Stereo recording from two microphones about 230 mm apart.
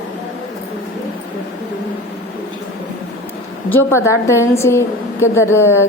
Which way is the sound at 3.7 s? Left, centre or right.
Centre.